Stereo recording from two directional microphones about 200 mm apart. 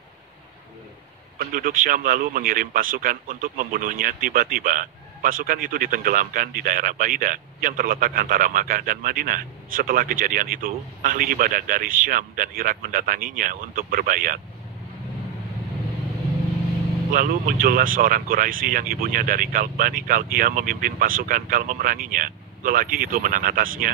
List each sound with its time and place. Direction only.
1.4 s speech: 45° right (ahead or behind)
17.1 s speech: 45° right (ahead or behind)